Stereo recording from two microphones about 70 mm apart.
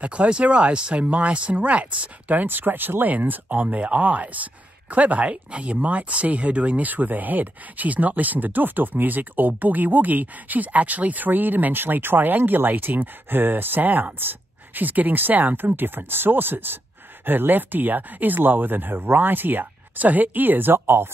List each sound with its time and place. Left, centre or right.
0.0 s speech: centre; by 21.1 s right